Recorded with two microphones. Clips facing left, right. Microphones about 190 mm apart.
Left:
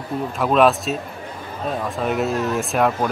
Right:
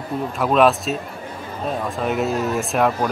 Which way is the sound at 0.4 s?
Centre (ahead or behind).